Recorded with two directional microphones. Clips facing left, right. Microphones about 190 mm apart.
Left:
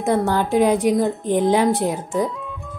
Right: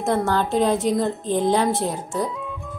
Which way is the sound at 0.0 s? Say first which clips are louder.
Left 2 dB; 15° left (ahead or behind).